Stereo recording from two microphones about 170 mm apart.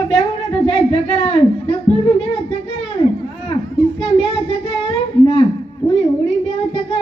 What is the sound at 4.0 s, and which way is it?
Child singing, 35° left (ahead or behind).